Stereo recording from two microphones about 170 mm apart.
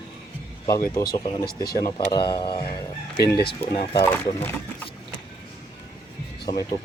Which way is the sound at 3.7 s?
30° left (ahead or behind).